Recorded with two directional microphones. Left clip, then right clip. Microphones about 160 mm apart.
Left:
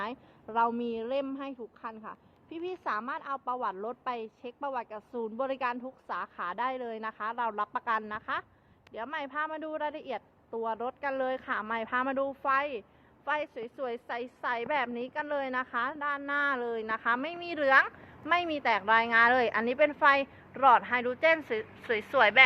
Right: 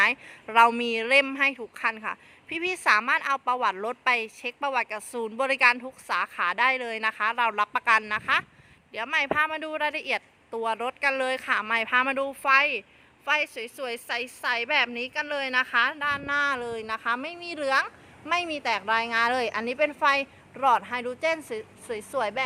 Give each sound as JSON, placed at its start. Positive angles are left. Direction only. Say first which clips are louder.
{"t": 0.5, "sound": "a woman's voice", "louder": "right 9 dB", "side_deg": -20}
{"t": 1.7, "sound": "speech", "louder": "right 13 dB", "side_deg": -60}
{"t": 2.5, "sound": "a woman's voice", "louder": "right 11 dB", "side_deg": -20}